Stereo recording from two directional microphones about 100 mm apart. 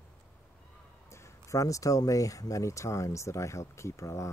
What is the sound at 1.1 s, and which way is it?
Speech, 30° left (ahead or behind).